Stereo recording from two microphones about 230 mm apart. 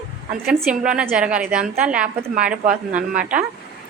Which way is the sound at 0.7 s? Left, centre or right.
Centre.